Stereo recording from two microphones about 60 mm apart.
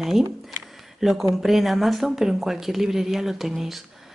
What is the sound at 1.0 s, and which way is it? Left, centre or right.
Speech, centre.